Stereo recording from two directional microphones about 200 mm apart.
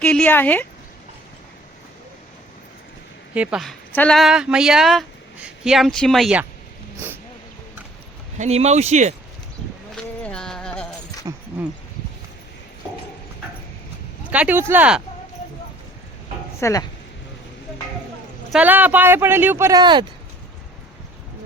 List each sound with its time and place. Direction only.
0.0 s speech: 5° left (ahead or behind)
3.3 s speech: 5° right (ahead or behind)
8.4 s speech: 30° right (ahead or behind)
9.9 s music: 5° left (ahead or behind)
11.3 s a sound: 25° right (ahead or behind)
14.3 s speech: 5° right (ahead or behind)
16.6 s speech: 15° left (ahead or behind)
18.5 s speech: 10° right (ahead or behind)